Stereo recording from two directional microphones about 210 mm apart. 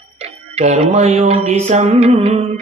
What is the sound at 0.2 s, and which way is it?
Music, 30° right (ahead or behind).